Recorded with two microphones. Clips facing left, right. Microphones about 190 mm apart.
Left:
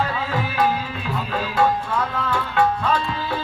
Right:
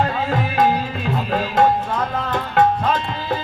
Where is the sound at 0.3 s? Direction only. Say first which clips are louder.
Right 3 dB; 45° right (ahead or behind).